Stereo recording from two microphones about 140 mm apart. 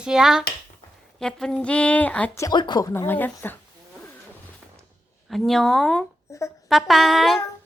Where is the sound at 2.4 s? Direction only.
30° left (ahead or behind).